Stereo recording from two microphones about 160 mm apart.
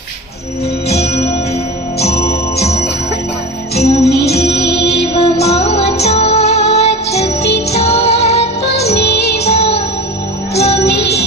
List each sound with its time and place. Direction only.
0.9 s music: 40° left (ahead or behind)
4.2 s music: 85° left
5.1 s music: 40° left (ahead or behind)
9.0 s music: 90° left
9.4 s music: 40° left (ahead or behind)
10.8 s music: 90° left